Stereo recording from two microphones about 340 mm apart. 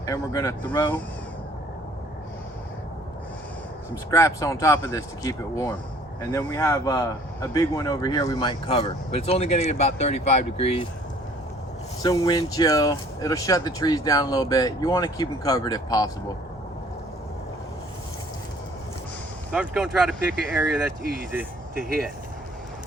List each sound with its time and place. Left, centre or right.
0.0 s speech: centre
4.1 s speech: centre
12.0 s speech: centre
19.5 s speech: centre
21.8 s speech: right